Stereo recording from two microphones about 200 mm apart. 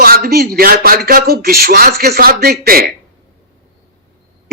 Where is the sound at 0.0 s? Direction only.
50° right (ahead or behind).